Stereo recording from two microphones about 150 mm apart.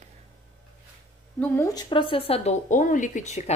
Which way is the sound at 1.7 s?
30° left (ahead or behind).